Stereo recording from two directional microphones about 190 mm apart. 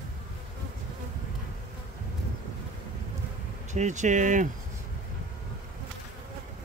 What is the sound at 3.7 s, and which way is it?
Speech, 40° right (ahead or behind).